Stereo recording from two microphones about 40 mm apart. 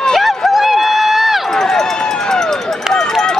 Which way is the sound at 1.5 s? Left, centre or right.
Centre.